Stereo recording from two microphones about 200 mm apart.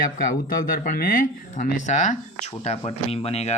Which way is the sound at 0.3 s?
45° left (ahead or behind).